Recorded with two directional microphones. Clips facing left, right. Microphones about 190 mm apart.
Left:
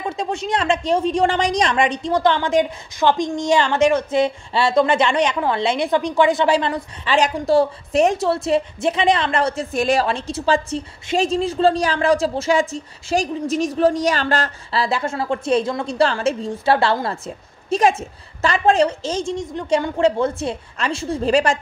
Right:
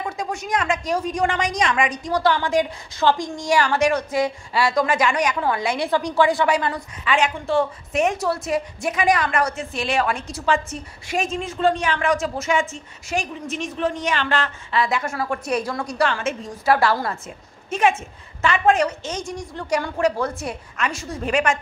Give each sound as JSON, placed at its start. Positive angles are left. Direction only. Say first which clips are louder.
{"t": 0.0, "sound": "a woman's voice", "louder": "left 4 dB", "side_deg": 25}
{"t": 7.2, "sound": "a woman's voice", "louder": "left 5 dB", "side_deg": 40}
{"t": 9.7, "sound": "a woman's voice", "louder": "left 5 dB", "side_deg": 45}
{"t": 10.0, "sound": "a woman's voice", "louder": "left 3 dB", "side_deg": 30}